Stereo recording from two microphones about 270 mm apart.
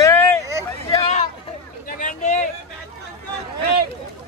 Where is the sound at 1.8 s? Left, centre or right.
Left.